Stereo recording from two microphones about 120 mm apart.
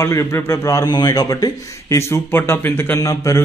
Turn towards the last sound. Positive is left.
turn(degrees=25)  # may be behind; listen again after turning